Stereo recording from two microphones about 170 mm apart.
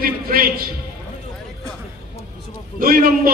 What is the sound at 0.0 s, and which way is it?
Speech, 60° right (ahead or behind).